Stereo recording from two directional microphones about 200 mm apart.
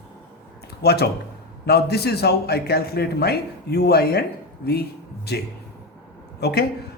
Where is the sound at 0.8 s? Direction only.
55° left (ahead or behind).